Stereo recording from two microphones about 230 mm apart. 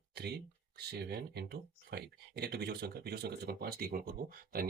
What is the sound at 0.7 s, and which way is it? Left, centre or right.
Speech, right.